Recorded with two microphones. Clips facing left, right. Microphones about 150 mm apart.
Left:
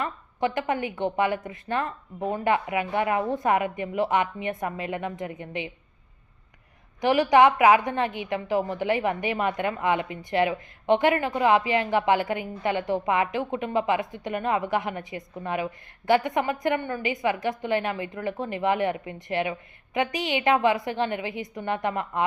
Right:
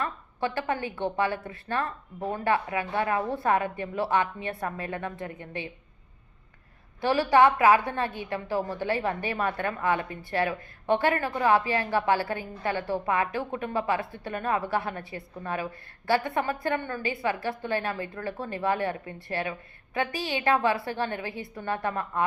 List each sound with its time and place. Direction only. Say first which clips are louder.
0.0 s a woman's voice: left 3 dB; 15° left (ahead or behind)
7.0 s a woman's voice: left 2 dB; 15° left (ahead or behind)